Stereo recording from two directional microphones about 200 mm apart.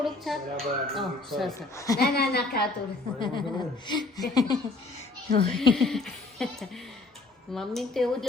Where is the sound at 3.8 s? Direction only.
20° left (ahead or behind).